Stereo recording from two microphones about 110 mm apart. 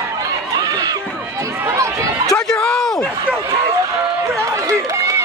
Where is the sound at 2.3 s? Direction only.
5° left (ahead or behind).